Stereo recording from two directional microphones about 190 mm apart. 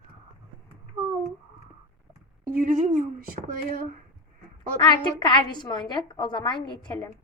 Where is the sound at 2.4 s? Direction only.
45° right (ahead or behind).